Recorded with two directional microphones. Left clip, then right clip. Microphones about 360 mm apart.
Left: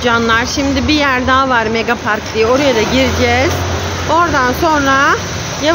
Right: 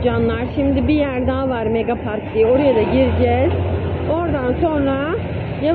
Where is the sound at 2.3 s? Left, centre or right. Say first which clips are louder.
Left 1 dB; left.